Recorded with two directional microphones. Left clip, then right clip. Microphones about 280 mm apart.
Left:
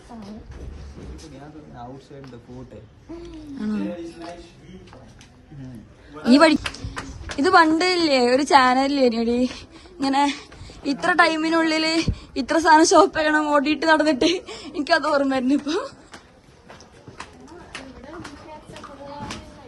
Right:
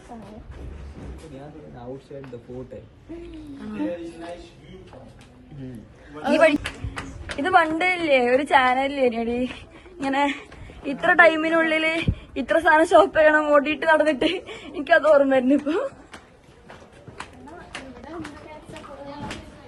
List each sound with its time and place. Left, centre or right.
6.3 s a woman's voice: left